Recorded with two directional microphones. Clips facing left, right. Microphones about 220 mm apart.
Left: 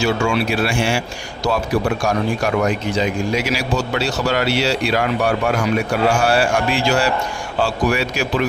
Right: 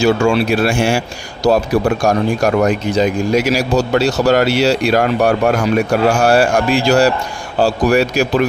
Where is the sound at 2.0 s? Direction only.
45° right (ahead or behind).